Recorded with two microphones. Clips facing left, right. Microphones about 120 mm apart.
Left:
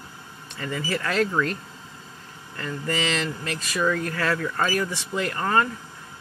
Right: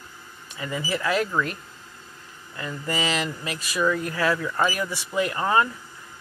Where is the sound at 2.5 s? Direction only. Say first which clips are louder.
Left 1 dB; 10° right (ahead or behind).